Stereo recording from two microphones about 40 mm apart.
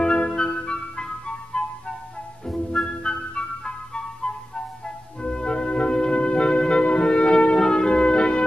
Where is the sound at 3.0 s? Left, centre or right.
Left.